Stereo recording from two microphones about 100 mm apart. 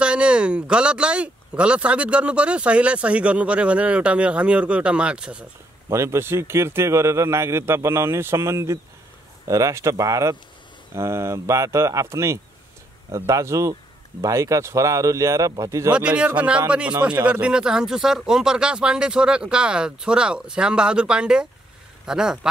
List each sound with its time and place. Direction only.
0.0 s speech: 10° right (ahead or behind)
5.9 s speech: 25° right (ahead or behind)
15.9 s speech: 10° right (ahead or behind)